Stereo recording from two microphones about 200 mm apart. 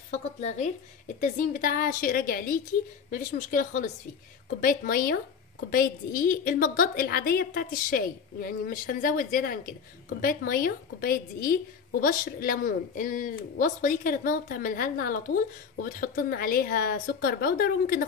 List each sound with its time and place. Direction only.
0.4 s a woman's voice: 35° left (ahead or behind)